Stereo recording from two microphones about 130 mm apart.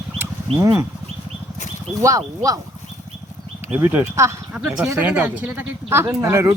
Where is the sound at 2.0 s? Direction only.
25° right (ahead or behind).